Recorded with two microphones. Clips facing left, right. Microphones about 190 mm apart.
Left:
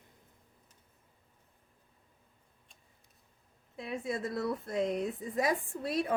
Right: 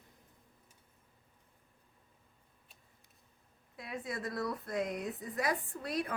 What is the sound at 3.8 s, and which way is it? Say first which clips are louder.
Speech: left 5 dB; 25° left (ahead or behind).